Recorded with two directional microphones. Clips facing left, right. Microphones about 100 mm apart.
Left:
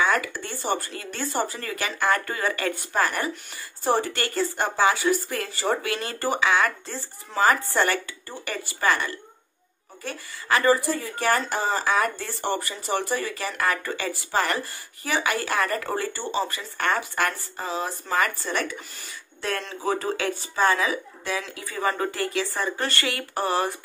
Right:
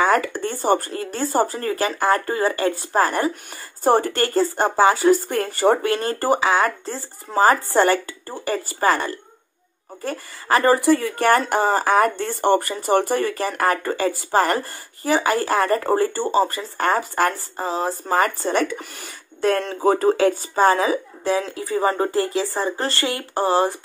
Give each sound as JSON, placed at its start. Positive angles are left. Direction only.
{"t": 0.0, "sound": "speech", "side_deg": -45}
{"t": 3.8, "sound": "speech", "side_deg": -45}
{"t": 10.8, "sound": "speech", "side_deg": -70}
{"t": 18.8, "sound": "speech", "side_deg": -55}
{"t": 19.4, "sound": "speech", "side_deg": -45}